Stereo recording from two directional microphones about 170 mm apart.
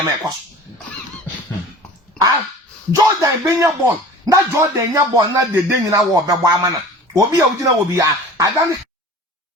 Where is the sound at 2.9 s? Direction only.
20° right (ahead or behind).